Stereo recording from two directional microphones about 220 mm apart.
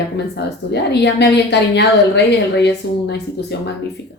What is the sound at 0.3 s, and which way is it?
Speech, 50° left (ahead or behind).